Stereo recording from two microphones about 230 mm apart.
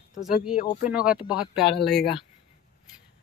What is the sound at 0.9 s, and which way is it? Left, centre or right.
Speech, centre.